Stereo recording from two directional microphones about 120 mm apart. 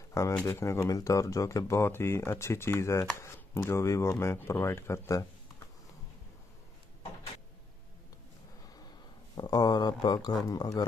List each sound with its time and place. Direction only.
0.2 s speech: 25° left (ahead or behind)
9.3 s speech: 35° left (ahead or behind)